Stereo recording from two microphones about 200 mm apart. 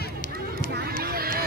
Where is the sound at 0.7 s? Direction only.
50° right (ahead or behind).